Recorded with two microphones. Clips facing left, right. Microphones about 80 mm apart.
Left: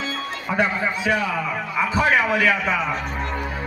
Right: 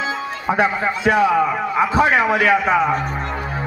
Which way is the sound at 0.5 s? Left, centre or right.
Centre.